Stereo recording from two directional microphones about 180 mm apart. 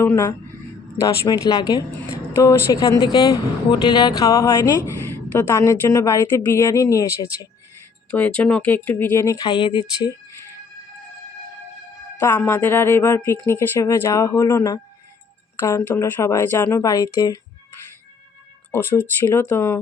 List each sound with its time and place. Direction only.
0.0 s a woman's voice: 15° left (ahead or behind)
8.1 s speech: 5° left (ahead or behind); by 10.1 s 25° left (ahead or behind)
12.2 s speech: 10° left (ahead or behind)
18.7 s speech: 10° left (ahead or behind)